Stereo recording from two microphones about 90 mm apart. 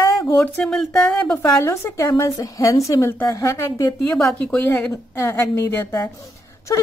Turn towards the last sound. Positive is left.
turn(degrees=35)  # may be behind; listen again after turning